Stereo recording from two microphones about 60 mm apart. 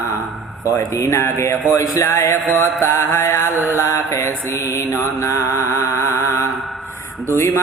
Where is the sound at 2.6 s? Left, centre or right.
Left.